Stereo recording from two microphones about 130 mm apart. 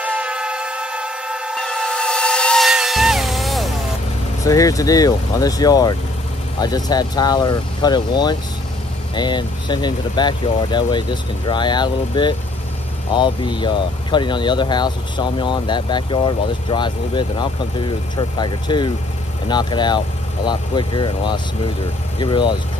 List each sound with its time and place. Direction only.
0.0 s vehicle: 10° right (ahead or behind)
4.5 s speech: 25° left (ahead or behind)